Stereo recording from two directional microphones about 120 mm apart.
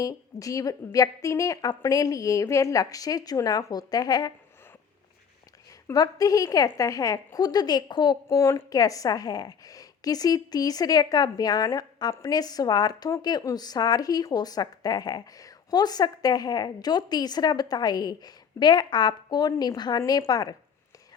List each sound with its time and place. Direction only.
0.0 s a woman's voice: 30° left (ahead or behind)
5.9 s a woman's voice: 30° left (ahead or behind)
8.4 s a woman's voice: 25° left (ahead or behind)